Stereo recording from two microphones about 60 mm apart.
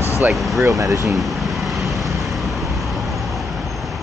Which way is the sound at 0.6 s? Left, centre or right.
Right.